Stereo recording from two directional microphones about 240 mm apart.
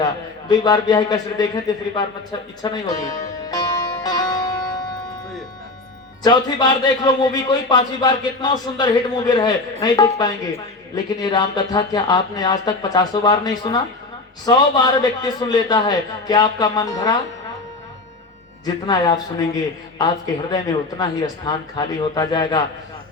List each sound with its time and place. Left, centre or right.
0.4 s a man's voice: centre
2.6 s music: centre
6.2 s a man's voice: centre
15.2 s a man's voice: centre
18.6 s a man's voice: centre